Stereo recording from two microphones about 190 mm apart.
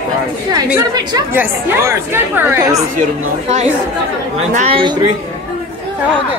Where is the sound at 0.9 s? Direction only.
20° right (ahead or behind).